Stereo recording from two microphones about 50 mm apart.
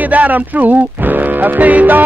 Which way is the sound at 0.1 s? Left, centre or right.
Right.